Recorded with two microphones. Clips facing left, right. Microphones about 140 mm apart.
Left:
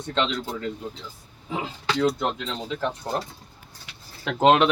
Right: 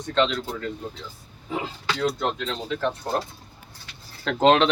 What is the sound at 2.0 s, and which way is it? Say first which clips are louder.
Speech: left 2 dB; 15° left (ahead or behind).